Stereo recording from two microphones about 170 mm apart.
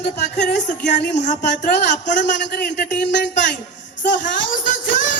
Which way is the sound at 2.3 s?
90° left.